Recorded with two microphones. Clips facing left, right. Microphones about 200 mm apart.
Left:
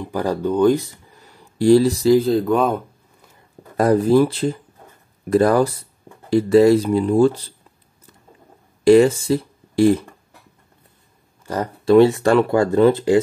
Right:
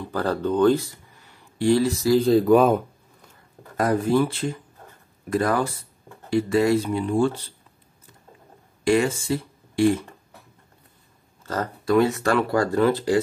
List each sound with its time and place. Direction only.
0.0 s speech: 15° left (ahead or behind)
1.6 s speech: 35° left (ahead or behind)
2.1 s speech: centre (ahead or behind)
3.7 s speech: 35° left (ahead or behind)
8.8 s speech: 35° left (ahead or behind)
11.4 s speech: 15° left (ahead or behind)
11.8 s speech: 30° left (ahead or behind)